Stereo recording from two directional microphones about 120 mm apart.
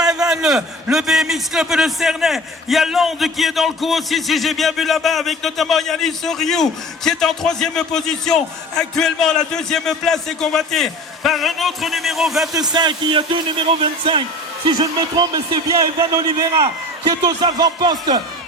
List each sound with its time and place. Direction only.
0.3 s a man's voice: 5° right (ahead or behind)
12.5 s a man's voice: 35° right (ahead or behind)